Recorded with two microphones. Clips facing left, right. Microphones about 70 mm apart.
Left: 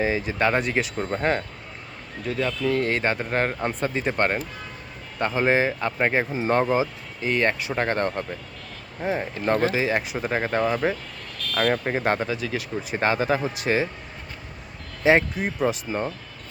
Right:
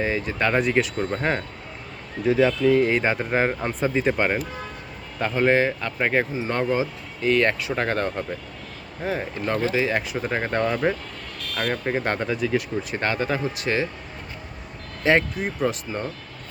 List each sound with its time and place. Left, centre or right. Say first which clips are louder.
0.0 s speech: left 1 dB; centre
2.2 s speech: right 7 dB; centre
5.2 s speech: right 1 dB; centre
6.5 s speech: left 4 dB; centre
7.4 s speech: even; centre
9.0 s speech: left 2 dB; centre
12.9 s speech: left 3 dB; centre
15.0 s speech: left 1 dB; centre